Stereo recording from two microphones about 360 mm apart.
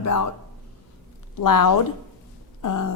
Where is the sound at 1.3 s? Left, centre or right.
Left.